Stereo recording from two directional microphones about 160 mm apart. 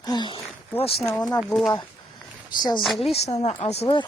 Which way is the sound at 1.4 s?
Centre (ahead or behind).